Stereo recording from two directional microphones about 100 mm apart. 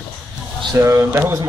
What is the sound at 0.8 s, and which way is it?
Speech, 25° right (ahead or behind).